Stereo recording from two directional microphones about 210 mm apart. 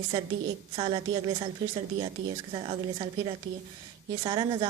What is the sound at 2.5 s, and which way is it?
A woman's voice, 25° right (ahead or behind).